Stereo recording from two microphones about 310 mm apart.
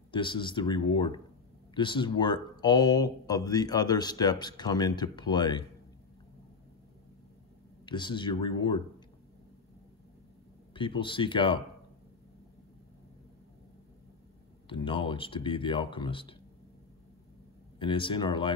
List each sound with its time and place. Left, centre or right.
0.1 s speech: centre
7.8 s speech: centre
10.7 s speech: centre
14.7 s speech: centre
17.7 s speech: centre